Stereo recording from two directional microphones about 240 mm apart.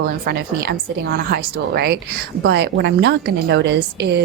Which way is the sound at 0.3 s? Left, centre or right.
Right.